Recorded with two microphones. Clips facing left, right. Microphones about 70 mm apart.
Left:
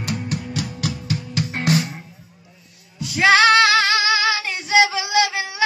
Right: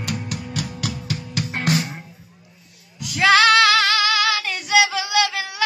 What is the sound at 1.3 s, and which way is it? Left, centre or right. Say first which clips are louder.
Music: left 1 dB; left.